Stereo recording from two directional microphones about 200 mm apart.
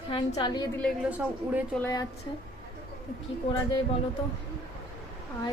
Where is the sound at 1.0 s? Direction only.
5° right (ahead or behind).